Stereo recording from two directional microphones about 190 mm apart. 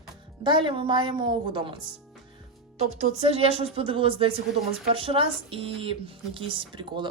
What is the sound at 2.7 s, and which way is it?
Speech, 35° right (ahead or behind).